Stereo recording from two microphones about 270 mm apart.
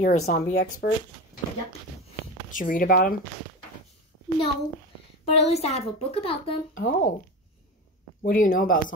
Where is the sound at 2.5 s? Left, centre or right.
Left.